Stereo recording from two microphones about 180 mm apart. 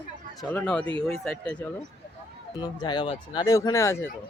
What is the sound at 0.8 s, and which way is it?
Speech, 30° right (ahead or behind).